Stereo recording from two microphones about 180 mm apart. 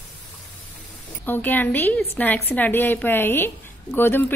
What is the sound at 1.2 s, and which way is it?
A woman's voice, 10° left (ahead or behind).